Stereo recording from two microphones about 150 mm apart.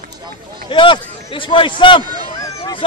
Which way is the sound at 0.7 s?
35° left (ahead or behind).